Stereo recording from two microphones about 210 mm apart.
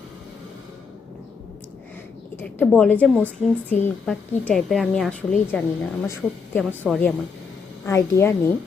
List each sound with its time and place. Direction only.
2.3 s a woman's voice: 10° left (ahead or behind)
7.9 s a woman's voice: 15° left (ahead or behind)